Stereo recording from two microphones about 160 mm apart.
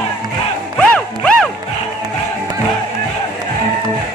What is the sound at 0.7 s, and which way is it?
Music, 5° left (ahead or behind).